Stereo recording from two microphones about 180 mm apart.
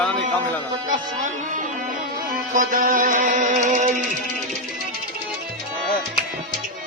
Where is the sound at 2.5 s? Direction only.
50° right (ahead or behind).